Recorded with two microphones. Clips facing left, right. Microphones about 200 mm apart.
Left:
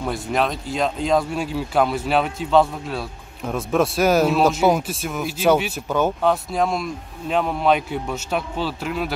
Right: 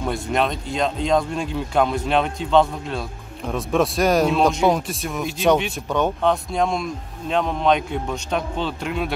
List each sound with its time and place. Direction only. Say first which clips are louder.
0.0 s speech: even; centre (ahead or behind)